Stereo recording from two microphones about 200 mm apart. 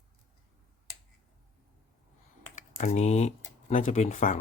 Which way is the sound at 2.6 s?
35° left (ahead or behind).